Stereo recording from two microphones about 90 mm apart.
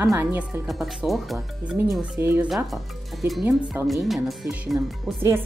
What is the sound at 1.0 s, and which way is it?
Speech, centre (ahead or behind).